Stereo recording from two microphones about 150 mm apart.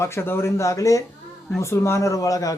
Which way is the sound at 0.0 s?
15° left (ahead or behind).